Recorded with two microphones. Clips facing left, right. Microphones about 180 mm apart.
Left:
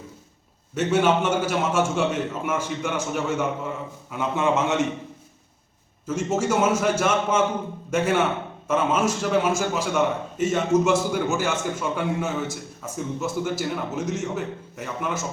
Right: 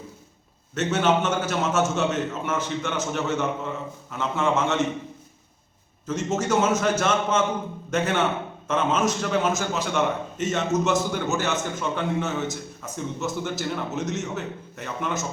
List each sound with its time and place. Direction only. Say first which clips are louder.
0.7 s a man's voice: left 2 dB; 10° left (ahead or behind)
6.1 s a man's voice: left 1 dB; 10° left (ahead or behind)